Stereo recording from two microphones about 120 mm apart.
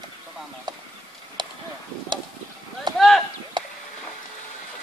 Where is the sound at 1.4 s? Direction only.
40° right (ahead or behind).